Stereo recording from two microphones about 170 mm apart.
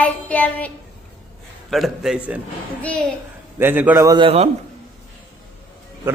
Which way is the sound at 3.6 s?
10° right (ahead or behind).